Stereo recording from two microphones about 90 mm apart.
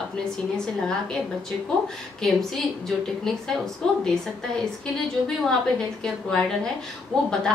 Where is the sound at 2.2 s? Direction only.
5° left (ahead or behind).